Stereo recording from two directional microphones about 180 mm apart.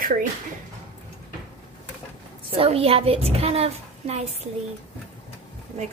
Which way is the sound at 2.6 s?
30° right (ahead or behind).